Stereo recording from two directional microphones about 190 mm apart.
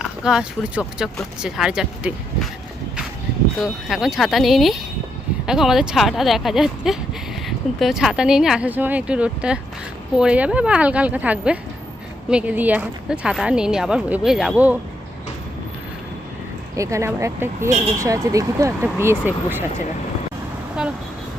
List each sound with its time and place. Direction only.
0.0 s speech: 5° right (ahead or behind)
3.6 s speech: centre (ahead or behind)
16.7 s speech: 15° right (ahead or behind)
17.7 s speech: 35° right (ahead or behind)
18.0 s speech: 15° right (ahead or behind)